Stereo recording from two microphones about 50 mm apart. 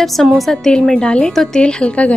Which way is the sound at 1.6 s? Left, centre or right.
Centre.